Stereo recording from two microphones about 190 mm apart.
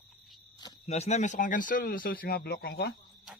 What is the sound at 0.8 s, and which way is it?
Speech, 35° left (ahead or behind).